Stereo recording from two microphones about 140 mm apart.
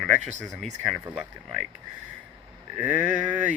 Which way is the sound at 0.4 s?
Centre (ahead or behind).